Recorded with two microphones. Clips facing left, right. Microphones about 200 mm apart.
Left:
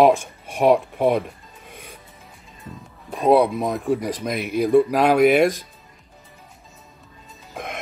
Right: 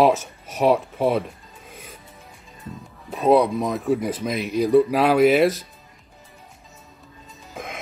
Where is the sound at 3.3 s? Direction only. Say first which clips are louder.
Left 1 dB; centre (ahead or behind).